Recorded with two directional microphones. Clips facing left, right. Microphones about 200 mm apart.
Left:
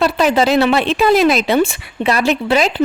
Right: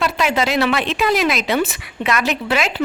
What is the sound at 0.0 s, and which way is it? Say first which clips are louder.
A woman's voice: left 5 dB; 35° left (ahead or behind).